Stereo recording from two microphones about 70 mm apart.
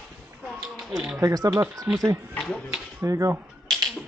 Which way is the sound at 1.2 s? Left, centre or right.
Right.